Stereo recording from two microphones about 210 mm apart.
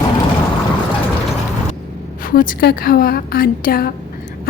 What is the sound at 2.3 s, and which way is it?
Speech, 45° left (ahead or behind).